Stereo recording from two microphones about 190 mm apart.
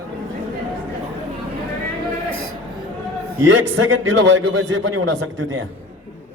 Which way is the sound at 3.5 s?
90° right.